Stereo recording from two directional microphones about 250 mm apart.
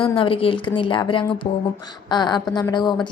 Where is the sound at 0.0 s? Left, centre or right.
Left.